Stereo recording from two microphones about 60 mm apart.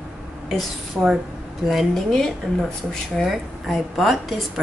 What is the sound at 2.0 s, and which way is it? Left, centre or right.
Speech, centre.